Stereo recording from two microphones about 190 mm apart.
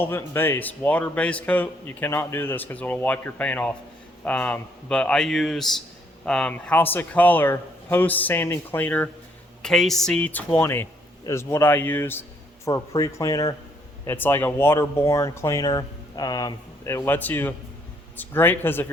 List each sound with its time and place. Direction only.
0.0 s speech: 10° left (ahead or behind)